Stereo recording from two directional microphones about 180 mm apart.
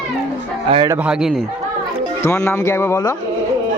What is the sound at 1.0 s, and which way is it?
Speech, centre (ahead or behind).